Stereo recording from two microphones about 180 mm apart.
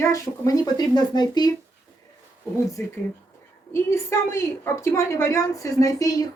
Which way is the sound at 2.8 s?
15° left (ahead or behind).